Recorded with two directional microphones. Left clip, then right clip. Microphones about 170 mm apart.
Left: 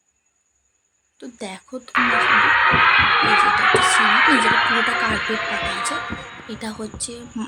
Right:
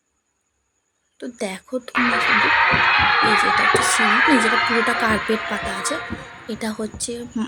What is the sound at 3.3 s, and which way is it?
Speech, 20° right (ahead or behind).